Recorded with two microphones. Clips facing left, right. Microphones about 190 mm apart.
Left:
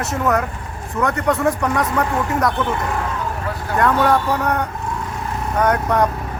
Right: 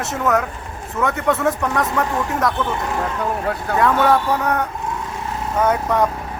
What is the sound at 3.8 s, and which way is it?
Speech, centre (ahead or behind).